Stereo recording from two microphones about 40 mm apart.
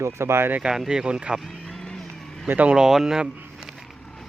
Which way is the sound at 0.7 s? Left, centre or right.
Centre.